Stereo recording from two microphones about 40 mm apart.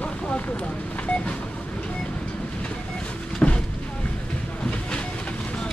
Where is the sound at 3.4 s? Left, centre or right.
Left.